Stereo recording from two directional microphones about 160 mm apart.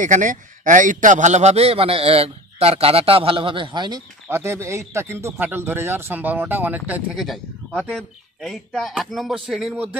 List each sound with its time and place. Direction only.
0.0 s a man's voice: 50° right (ahead or behind); by 4.0 s 30° right (ahead or behind)
4.3 s a man's voice: 15° right (ahead or behind)